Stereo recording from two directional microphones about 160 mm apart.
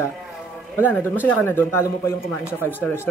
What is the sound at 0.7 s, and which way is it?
Speech, 15° left (ahead or behind).